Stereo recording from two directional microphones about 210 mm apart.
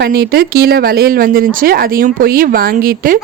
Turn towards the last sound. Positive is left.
turn(degrees=-40)  # may be behind; listen again after turning